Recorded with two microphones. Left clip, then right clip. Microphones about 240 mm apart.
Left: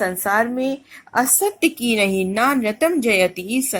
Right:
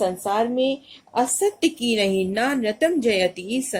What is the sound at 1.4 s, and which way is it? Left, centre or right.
A woman's voice, centre.